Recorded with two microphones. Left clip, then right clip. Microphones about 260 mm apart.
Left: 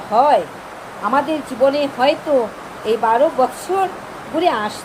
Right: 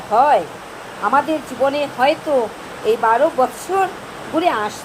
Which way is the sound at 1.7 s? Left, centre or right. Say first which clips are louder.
Even; right.